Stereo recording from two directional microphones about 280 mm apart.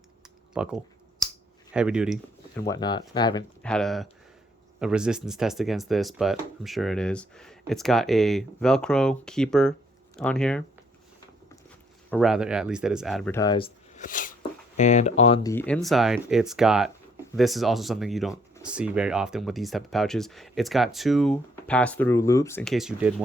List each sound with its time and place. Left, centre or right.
0.5 s speech: centre
2.6 s speech: centre
3.6 s speech: centre
12.1 s speech: centre; by 15.5 s left
15.5 s speech: centre